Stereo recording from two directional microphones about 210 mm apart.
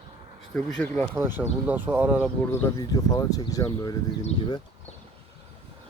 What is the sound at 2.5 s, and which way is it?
Speech, 15° left (ahead or behind).